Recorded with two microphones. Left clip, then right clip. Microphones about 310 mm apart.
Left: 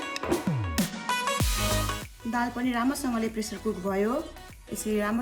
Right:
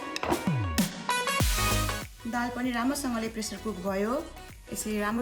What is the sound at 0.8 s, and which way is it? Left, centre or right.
Music, centre.